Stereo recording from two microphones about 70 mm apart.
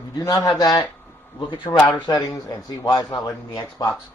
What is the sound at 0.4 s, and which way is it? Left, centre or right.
Speech, left.